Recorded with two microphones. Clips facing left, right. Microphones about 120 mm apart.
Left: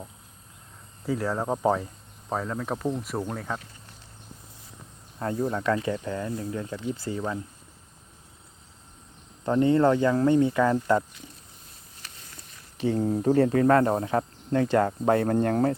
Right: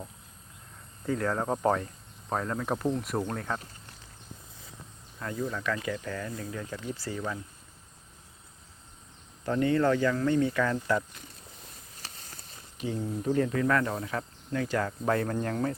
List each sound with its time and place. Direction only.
1.0 s speech: 5° left (ahead or behind)
5.2 s speech: 30° left (ahead or behind)
9.4 s speech: 25° left (ahead or behind)
12.0 s a sound: 40° right (ahead or behind)
12.9 s speech: 45° left (ahead or behind)